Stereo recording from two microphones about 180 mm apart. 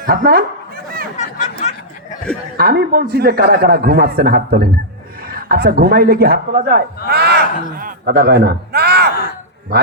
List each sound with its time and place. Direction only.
0.0 s speech: 50° right (ahead or behind)
1.1 s a sound: 40° left (ahead or behind)
2.6 s a man's voice: 55° right (ahead or behind)